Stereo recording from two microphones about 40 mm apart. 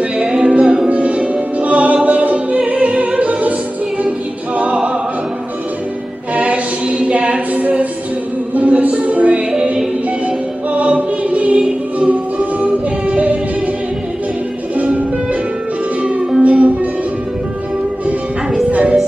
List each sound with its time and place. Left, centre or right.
0.2 s music: right
3.3 s opera: right
6.3 s music: right
10.8 s choir: right
12.1 s music: right
16.0 s music: right
18.0 s music: right